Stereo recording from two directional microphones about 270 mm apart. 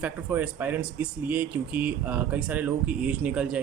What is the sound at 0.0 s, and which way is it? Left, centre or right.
Speech, centre.